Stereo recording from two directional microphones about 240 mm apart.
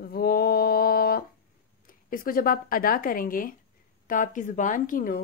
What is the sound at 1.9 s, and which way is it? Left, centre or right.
Speech, left.